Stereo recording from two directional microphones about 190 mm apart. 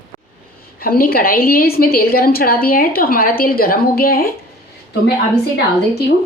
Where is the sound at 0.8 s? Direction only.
50° left (ahead or behind).